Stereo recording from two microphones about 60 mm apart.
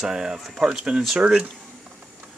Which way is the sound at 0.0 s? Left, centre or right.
Centre.